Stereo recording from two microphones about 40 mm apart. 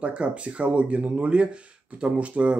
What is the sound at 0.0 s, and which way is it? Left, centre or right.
A man's voice, right.